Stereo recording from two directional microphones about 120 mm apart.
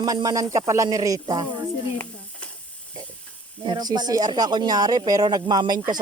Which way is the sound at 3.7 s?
35° right (ahead or behind).